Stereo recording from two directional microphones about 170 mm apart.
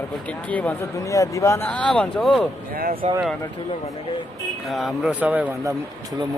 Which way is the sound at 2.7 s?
60° right (ahead or behind).